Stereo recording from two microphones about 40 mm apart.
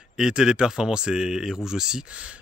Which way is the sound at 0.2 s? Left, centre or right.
Centre.